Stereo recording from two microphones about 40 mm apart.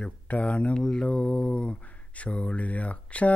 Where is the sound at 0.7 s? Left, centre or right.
Left.